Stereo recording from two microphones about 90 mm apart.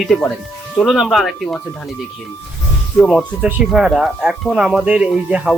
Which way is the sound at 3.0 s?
Centre (ahead or behind).